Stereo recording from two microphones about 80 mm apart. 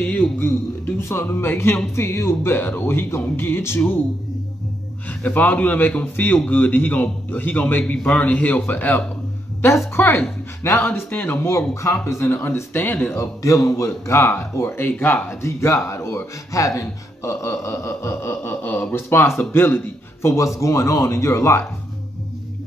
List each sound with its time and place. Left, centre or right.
0.0 s a man's voice: left
5.2 s a man's voice: left
13.1 s speech: left